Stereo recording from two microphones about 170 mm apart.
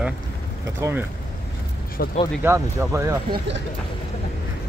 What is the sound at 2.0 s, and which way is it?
Speech, 60° left (ahead or behind).